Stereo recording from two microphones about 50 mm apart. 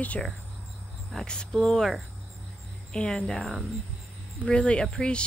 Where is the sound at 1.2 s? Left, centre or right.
Centre.